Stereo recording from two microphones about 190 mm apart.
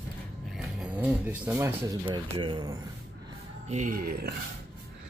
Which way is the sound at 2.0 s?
25° right (ahead or behind).